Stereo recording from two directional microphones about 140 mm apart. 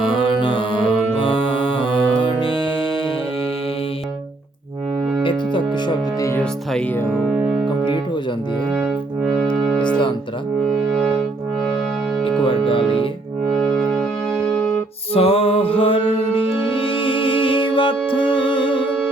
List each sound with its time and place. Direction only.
0.0 s music: 35° left (ahead or behind)
5.2 s music: 35° left (ahead or behind)
7.1 s music: centre (ahead or behind)
8.7 s music: centre (ahead or behind)
10.7 s music: centre (ahead or behind)
12.5 s music: 35° left (ahead or behind)
13.5 s music: 5° left (ahead or behind)
15.1 s music: 45° left (ahead or behind)